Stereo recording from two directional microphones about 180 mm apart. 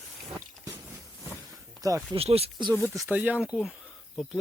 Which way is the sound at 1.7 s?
20° right (ahead or behind).